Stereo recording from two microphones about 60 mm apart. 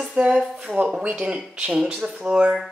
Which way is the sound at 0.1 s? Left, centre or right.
Centre.